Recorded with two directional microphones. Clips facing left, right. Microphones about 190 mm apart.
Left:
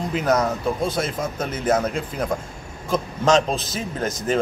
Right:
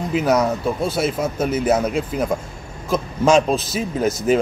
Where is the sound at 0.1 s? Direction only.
10° right (ahead or behind).